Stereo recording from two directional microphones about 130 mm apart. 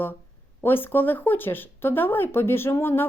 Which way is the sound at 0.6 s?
15° left (ahead or behind).